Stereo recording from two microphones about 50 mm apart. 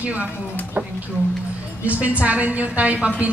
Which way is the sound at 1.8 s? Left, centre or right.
Right.